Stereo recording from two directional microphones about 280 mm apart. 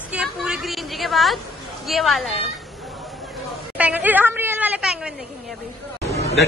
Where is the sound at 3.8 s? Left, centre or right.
Centre.